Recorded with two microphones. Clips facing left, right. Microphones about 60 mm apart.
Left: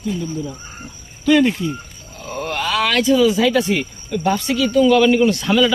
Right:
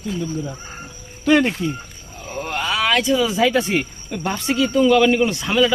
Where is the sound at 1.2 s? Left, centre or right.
Right.